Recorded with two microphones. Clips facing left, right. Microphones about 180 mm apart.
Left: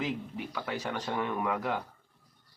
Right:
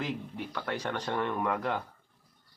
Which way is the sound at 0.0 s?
5° left (ahead or behind).